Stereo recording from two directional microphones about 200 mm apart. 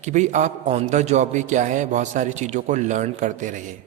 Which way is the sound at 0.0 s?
35° right (ahead or behind).